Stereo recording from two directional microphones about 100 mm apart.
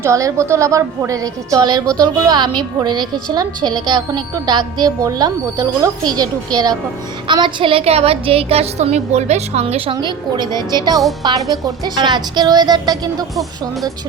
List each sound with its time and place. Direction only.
0.0 s a woman's voice: 30° right (ahead or behind)
7.3 s a woman's voice: 55° right (ahead or behind); by 9.9 s 90° right
9.9 s speech: 50° right (ahead or behind)